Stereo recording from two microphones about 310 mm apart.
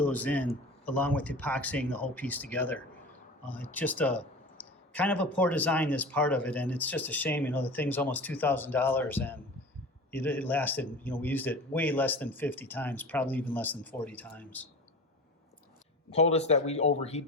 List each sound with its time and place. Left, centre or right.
0.0 s a man's voice: centre
16.1 s speech: left